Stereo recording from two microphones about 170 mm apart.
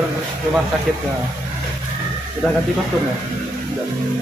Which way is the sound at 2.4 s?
Centre (ahead or behind).